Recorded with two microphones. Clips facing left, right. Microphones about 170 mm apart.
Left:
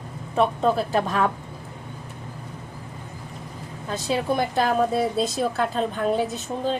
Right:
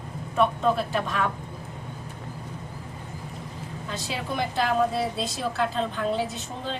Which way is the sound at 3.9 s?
40° left (ahead or behind).